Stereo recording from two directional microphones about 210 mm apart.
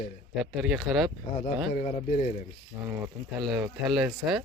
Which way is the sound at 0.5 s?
Centre (ahead or behind).